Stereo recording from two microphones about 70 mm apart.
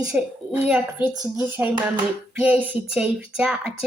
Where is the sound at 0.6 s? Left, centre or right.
Centre.